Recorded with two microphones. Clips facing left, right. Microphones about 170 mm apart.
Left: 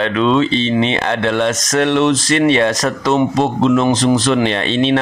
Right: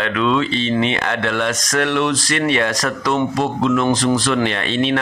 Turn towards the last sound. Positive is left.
turn(degrees=25)  # may be behind; listen again after turning